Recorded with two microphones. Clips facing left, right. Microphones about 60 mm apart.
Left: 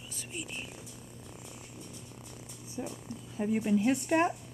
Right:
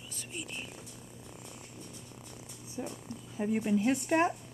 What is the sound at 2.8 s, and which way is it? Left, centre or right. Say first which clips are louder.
Speech: left 1 dB; centre.